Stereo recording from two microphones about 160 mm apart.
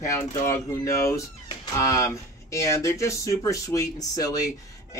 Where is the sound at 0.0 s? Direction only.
20° left (ahead or behind).